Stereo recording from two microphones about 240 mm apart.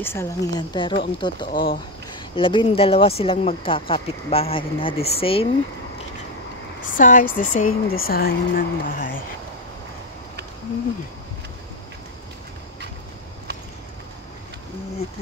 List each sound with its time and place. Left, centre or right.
0.0 s speech: centre
1.5 s speech: left
2.3 s speech: left
6.9 s speech: left